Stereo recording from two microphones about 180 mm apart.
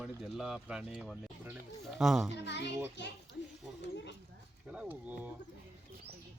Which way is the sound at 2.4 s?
75° left (ahead or behind).